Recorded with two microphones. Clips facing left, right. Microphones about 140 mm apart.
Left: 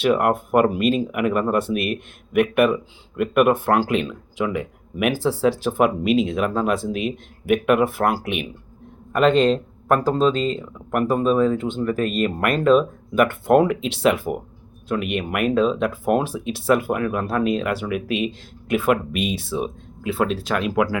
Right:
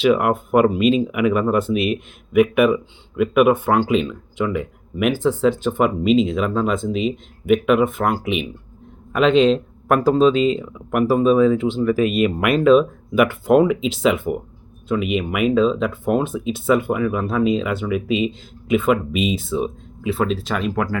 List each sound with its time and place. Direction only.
0.1 s speech: centre (ahead or behind)
1.7 s speech: 55° left (ahead or behind)
2.3 s speech: centre (ahead or behind)